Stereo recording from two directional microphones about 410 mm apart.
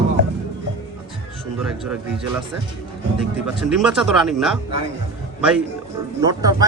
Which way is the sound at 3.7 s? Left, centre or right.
Centre.